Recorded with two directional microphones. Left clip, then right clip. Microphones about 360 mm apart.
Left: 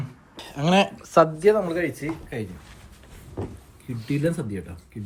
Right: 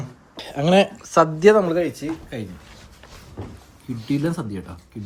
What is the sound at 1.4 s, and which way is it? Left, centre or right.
Speech, right.